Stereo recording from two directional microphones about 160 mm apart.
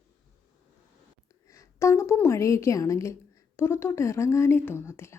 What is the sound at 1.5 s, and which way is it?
A woman's voice, 20° left (ahead or behind).